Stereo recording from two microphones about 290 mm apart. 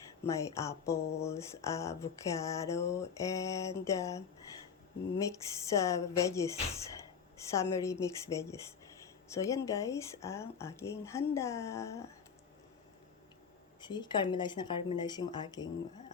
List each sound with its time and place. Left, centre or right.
0.3 s speech: centre
5.2 s speech: centre
13.8 s speech: centre